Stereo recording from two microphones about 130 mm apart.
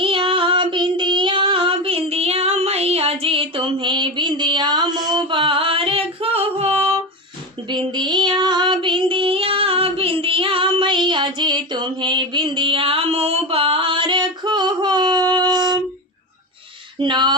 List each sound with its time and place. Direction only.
0.0 s child singing: 45° right (ahead or behind)
5.1 s female singing: 40° right (ahead or behind)
7.7 s child singing: 35° right (ahead or behind)
17.0 s a sound: 35° right (ahead or behind)